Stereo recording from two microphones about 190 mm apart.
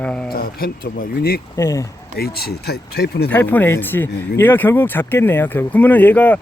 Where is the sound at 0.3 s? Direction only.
50° left (ahead or behind).